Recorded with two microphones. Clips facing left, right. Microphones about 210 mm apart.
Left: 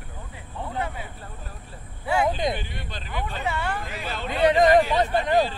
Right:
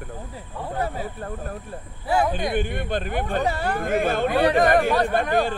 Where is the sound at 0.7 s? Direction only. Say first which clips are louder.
Right 4 dB; 40° right (ahead or behind).